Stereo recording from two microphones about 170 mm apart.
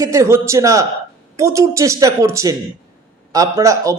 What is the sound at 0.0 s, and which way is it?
Speech, 20° right (ahead or behind).